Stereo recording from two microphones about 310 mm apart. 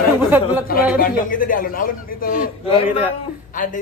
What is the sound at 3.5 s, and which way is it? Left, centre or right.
Speech, left.